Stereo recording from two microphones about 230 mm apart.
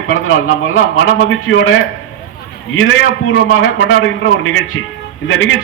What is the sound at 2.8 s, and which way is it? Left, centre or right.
A man's voice, left.